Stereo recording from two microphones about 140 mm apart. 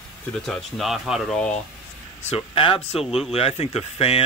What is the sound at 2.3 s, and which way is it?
Speech, 40° left (ahead or behind).